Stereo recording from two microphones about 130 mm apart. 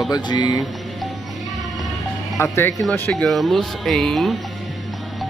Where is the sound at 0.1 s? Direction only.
35° left (ahead or behind).